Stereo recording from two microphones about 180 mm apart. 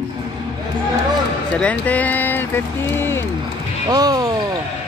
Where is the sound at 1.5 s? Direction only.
5° left (ahead or behind).